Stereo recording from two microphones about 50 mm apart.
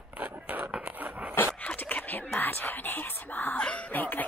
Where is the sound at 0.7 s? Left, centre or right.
Right.